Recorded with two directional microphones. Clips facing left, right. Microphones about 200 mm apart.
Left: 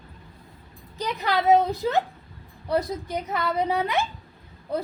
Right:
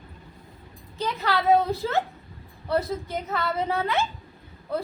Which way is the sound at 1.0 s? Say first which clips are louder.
Left 1 dB; 15° left (ahead or behind).